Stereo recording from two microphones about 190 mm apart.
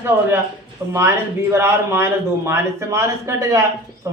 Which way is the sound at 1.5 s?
15° right (ahead or behind).